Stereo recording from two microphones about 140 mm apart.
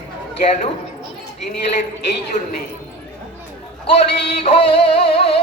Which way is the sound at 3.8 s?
45° left (ahead or behind).